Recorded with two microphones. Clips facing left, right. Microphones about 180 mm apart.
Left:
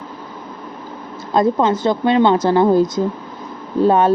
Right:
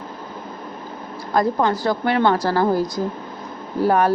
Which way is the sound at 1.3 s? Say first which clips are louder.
Left 4 dB; 20° left (ahead or behind).